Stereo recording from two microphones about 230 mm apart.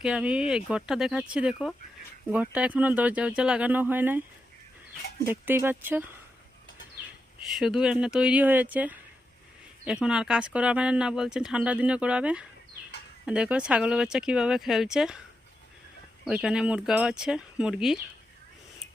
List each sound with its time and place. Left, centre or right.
0.0 s speech: centre
5.3 s speech: centre
7.0 s bird: centre
7.5 s speech: centre
16.2 s speech: centre